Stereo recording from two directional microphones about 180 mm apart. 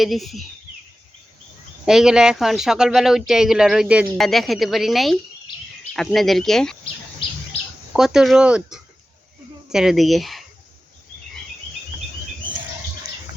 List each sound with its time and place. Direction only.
0.0 s speech: centre (ahead or behind)
1.8 s speech: 5° right (ahead or behind)
7.2 s bird: 30° left (ahead or behind)
7.9 s speech: centre (ahead or behind)